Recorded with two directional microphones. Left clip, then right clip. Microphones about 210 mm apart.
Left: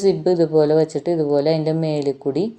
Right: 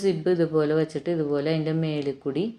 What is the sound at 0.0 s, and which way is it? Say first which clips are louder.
Speech: left 6 dB; 20° left (ahead or behind).